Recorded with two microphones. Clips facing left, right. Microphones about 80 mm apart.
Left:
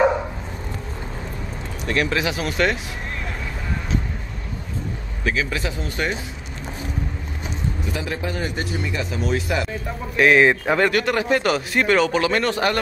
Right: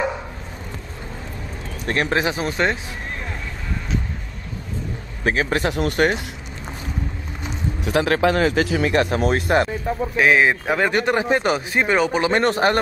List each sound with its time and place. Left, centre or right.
1.9 s speech: right
5.2 s speech: right
7.8 s speech: right
10.1 s a man's voice: centre
10.9 s speech: right
12.3 s speech: right